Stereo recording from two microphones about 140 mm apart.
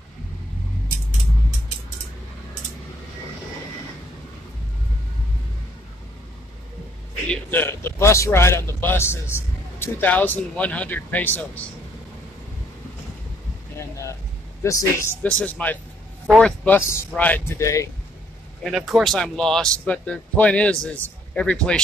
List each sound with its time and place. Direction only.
7.2 s a man's voice: 15° left (ahead or behind)
13.7 s a sound: 20° left (ahead or behind)
14.6 s a man's voice: 20° left (ahead or behind)
17.6 s speech: 20° left (ahead or behind)
18.6 s speech: centre (ahead or behind)